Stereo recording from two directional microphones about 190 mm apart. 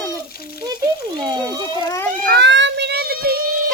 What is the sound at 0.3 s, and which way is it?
Frying, 55° left (ahead or behind).